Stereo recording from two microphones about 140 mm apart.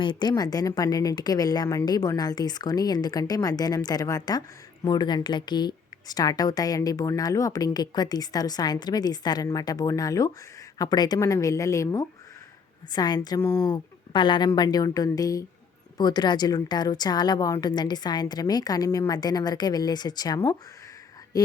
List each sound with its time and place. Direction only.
0.0 s a woman's voice: 35° left (ahead or behind)
13.7 s a woman's voice: 35° left (ahead or behind)